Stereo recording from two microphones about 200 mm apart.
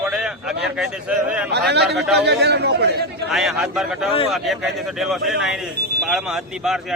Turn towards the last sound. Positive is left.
turn(degrees=0)  # may be behind; listen again after turning